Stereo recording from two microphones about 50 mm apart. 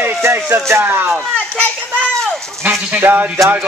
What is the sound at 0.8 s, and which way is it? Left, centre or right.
Speech, right.